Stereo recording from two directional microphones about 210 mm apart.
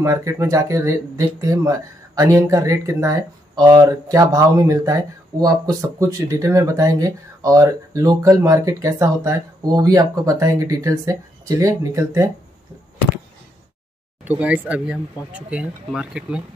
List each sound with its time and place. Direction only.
0.0 s speech: 15° right (ahead or behind)
14.2 s speech: 5° right (ahead or behind)